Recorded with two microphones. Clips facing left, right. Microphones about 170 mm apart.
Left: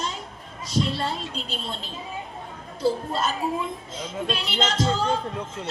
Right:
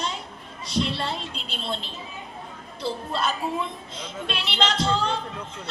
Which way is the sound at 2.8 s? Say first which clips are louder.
Left 4 dB; 45° left (ahead or behind).